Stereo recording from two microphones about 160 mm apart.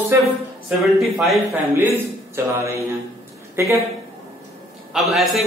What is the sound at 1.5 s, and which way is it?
A man's voice, 15° right (ahead or behind).